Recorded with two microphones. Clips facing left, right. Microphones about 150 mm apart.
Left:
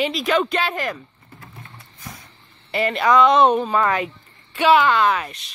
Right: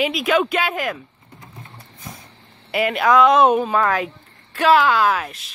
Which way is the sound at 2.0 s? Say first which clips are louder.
Right 1 dB; 25° right (ahead or behind).